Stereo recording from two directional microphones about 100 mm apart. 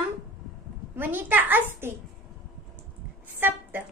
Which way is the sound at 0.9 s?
20° right (ahead or behind).